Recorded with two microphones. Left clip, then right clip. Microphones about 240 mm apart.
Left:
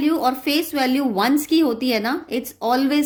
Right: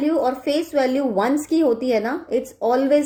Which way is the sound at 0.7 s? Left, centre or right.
Left.